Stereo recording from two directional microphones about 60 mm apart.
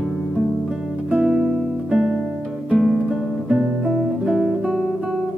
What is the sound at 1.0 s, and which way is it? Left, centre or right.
Music, centre.